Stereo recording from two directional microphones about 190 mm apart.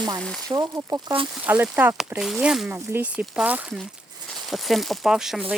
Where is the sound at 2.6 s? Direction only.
15° right (ahead or behind).